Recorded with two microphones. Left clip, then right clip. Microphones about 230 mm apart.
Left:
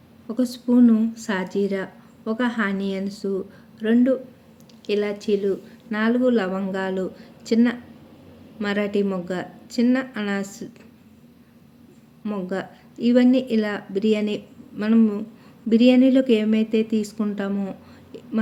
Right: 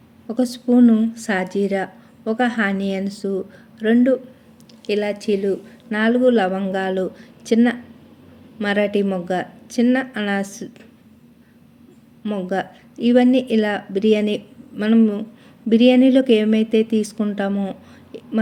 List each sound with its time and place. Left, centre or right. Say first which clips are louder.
0.3 s a woman's voice: right 4 dB; centre
12.2 s a woman's voice: right 5 dB; centre